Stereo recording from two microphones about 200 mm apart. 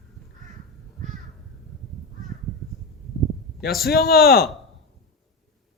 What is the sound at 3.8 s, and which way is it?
Speech, 50° left (ahead or behind).